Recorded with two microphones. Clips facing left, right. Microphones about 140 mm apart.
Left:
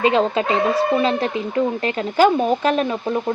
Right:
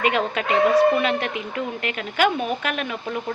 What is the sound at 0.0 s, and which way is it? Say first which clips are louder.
Speech: left 5 dB; 30° left (ahead or behind).